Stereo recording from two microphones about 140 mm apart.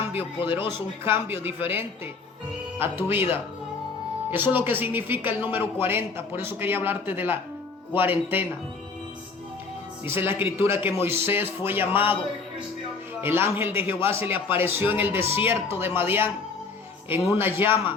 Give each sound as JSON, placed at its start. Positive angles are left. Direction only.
{"t": 0.2, "sound": "speech", "side_deg": 35}
{"t": 1.0, "sound": "a man's voice", "side_deg": -15}
{"t": 4.3, "sound": "a man's voice", "side_deg": -15}
{"t": 10.1, "sound": "a man's voice", "side_deg": -15}
{"t": 13.2, "sound": "a man's voice", "side_deg": -15}
{"t": 14.3, "sound": "speech", "side_deg": 40}
{"t": 14.6, "sound": "a man's voice", "side_deg": -15}